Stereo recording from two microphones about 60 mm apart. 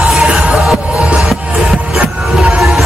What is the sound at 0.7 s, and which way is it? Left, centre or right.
Music, centre.